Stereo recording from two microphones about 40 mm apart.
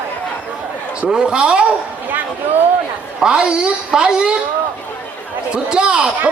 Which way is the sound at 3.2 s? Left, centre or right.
Right.